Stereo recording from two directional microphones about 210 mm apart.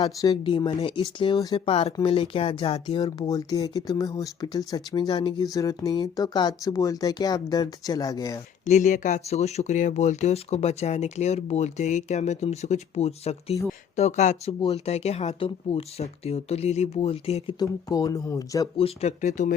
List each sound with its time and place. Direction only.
0.0 s speech: 20° left (ahead or behind)
8.6 s speech: 35° left (ahead or behind)